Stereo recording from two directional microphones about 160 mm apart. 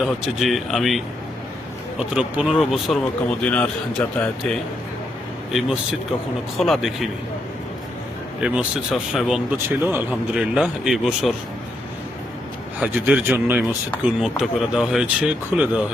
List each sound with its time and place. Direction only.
0.0 s speech: centre (ahead or behind)
5.5 s speech: 5° right (ahead or behind)
8.4 s speech: 5° right (ahead or behind)
9.6 s speech: 15° right (ahead or behind)
12.8 s speech: 10° right (ahead or behind)
14.0 s speech: centre (ahead or behind)